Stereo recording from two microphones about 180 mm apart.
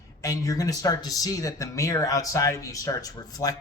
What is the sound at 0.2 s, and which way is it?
Speech, 20° left (ahead or behind).